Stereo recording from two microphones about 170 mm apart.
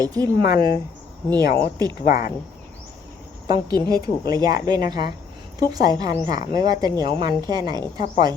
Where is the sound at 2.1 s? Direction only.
55° left (ahead or behind).